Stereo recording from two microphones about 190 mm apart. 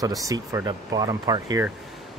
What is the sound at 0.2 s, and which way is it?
Speech, 15° right (ahead or behind).